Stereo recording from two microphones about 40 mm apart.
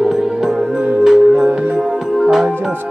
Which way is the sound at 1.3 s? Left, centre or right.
Right.